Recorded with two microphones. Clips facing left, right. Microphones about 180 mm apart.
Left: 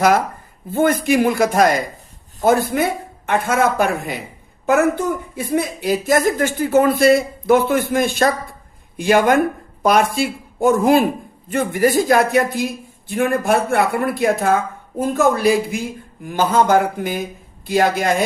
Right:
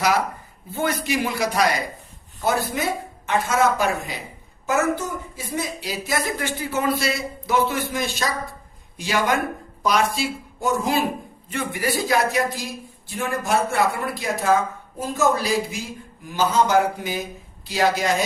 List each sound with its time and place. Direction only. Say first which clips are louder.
0.7 s speech: left 8 dB; 50° left (ahead or behind)